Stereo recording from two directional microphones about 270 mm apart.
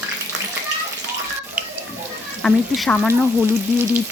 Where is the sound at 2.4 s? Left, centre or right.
Centre.